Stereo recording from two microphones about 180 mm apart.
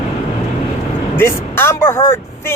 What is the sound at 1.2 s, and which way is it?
Speech, 15° left (ahead or behind).